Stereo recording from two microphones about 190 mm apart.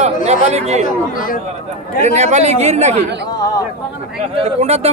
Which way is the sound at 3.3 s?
20° left (ahead or behind).